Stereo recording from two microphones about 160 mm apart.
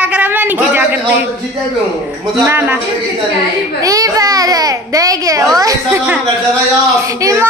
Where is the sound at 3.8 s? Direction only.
20° right (ahead or behind).